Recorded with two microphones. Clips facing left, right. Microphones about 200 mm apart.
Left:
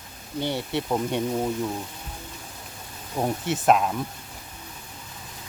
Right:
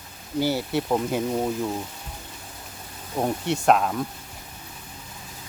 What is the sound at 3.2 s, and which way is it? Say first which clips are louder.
Speech: right 1 dB; centre (ahead or behind).